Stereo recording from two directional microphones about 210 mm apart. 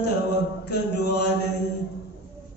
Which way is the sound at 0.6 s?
50° left (ahead or behind).